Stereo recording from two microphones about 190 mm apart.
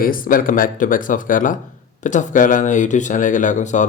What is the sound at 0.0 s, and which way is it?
A man's voice, 45° left (ahead or behind).